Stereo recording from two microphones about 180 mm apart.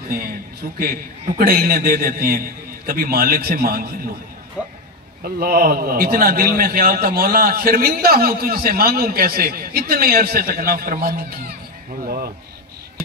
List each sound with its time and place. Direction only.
0.1 s a man's voice: 55° right (ahead or behind)
4.6 s speech: 5° right (ahead or behind)
5.2 s a man's voice: 55° right (ahead or behind)